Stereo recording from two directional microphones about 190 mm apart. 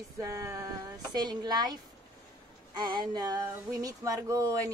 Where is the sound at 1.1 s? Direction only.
20° right (ahead or behind).